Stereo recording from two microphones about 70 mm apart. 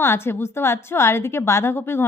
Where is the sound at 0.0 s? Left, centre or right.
Left.